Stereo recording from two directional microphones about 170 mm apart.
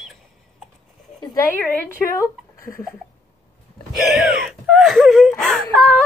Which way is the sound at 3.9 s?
Centre (ahead or behind).